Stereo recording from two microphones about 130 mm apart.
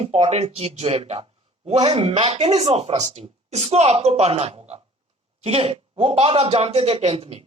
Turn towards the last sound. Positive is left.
turn(degrees=-50)  # may be behind; listen again after turning